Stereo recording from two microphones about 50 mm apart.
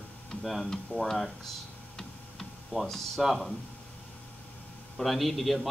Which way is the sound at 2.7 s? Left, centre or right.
Centre.